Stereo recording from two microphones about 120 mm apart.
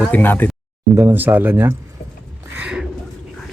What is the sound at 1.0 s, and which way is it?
Speech, 20° right (ahead or behind).